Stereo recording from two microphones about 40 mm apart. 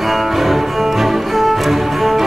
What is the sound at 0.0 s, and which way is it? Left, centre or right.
Music, centre.